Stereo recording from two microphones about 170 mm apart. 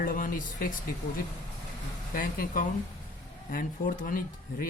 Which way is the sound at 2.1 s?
55° left (ahead or behind).